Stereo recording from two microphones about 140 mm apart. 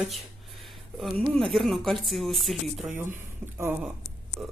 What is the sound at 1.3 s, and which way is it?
Speech, centre (ahead or behind).